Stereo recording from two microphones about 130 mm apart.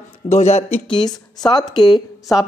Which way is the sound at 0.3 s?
55° left (ahead or behind).